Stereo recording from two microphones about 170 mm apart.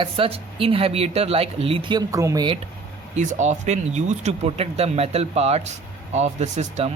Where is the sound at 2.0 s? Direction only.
20° right (ahead or behind).